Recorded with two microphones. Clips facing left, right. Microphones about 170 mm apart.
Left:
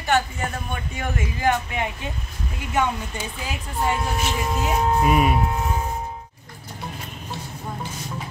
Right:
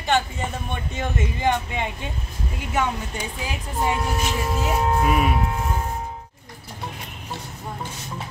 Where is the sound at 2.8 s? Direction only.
15° right (ahead or behind).